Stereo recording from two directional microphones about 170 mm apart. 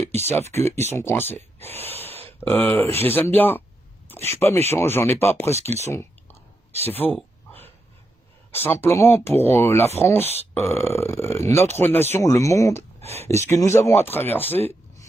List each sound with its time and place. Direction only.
0.0 s speech: 40° right (ahead or behind)
0.5 s speech: 15° left (ahead or behind)
5.5 s speech: 40° right (ahead or behind)
5.9 s clicking: 15° left (ahead or behind)
6.8 s speech: 10° left (ahead or behind)
8.5 s speech: 15° left (ahead or behind)